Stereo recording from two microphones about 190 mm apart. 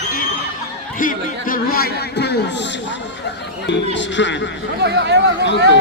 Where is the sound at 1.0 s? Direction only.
45° left (ahead or behind).